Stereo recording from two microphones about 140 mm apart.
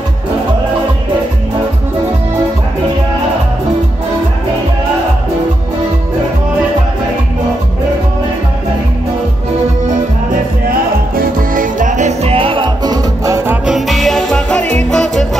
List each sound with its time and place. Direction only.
10.7 s music: 85° right; by 13.6 s 20° right (ahead or behind)
13.7 s music: centre (ahead or behind)